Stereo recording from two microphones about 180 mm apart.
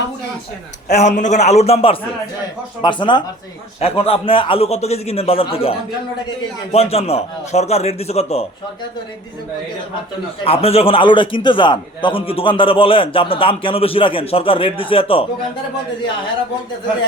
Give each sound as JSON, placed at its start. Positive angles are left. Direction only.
{"t": 0.9, "sound": "a man's voice", "side_deg": 40}
{"t": 6.7, "sound": "a man's voice", "side_deg": 35}
{"t": 10.4, "sound": "a man's voice", "side_deg": 35}